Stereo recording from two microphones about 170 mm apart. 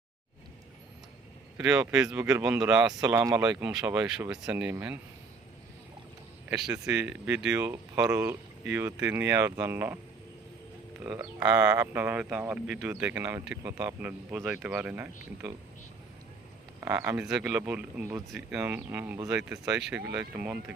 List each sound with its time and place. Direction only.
1.5 s speech: 5° right (ahead or behind)
6.5 s speech: 5° right (ahead or behind)
11.0 s speech: 20° right (ahead or behind)
16.8 s speech: 20° right (ahead or behind)
17.2 s speech: 5° right (ahead or behind)
20.1 s speech: 25° right (ahead or behind)
20.4 s speech: 5° right (ahead or behind)